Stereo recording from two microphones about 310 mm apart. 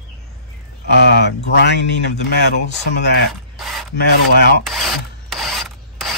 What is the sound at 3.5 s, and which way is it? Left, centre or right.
Rub, centre.